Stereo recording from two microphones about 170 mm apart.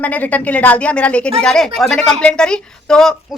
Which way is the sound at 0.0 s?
10° left (ahead or behind).